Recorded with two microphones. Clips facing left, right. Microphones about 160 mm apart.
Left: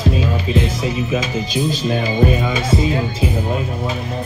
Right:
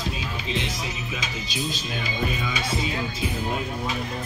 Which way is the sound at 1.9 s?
50° left (ahead or behind).